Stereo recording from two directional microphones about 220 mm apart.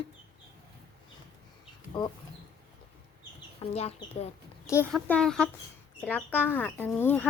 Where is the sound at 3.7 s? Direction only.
30° left (ahead or behind).